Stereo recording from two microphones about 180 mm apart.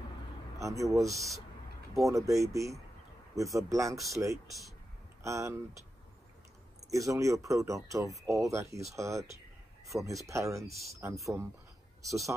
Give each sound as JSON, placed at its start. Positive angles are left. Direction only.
{"t": 0.6, "sound": "speech", "side_deg": -15}
{"t": 4.5, "sound": "speech", "side_deg": 0}
{"t": 5.2, "sound": "speech", "side_deg": -15}
{"t": 6.9, "sound": "speech", "side_deg": -15}